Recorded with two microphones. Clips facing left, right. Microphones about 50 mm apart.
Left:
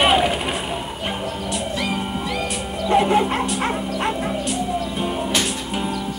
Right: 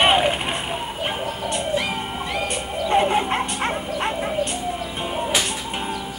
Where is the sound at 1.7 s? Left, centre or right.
Centre.